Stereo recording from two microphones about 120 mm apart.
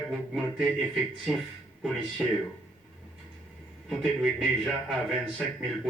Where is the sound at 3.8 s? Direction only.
Centre (ahead or behind).